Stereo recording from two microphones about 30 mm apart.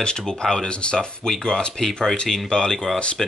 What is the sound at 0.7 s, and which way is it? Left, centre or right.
Speech, left.